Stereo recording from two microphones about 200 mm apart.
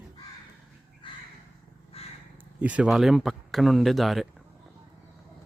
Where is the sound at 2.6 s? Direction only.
5° right (ahead or behind).